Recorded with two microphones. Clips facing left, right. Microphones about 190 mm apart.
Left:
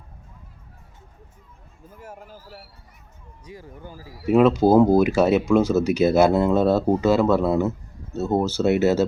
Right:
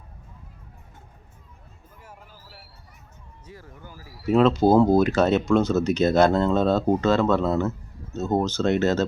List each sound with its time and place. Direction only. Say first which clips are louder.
2.0 s a sound: left 7 dB; 45° left (ahead or behind)
3.4 s speech: left 4 dB; 15° left (ahead or behind)
3.8 s a man's voice: left 5 dB; 30° left (ahead or behind)
4.3 s speech: left 2 dB; 10° left (ahead or behind)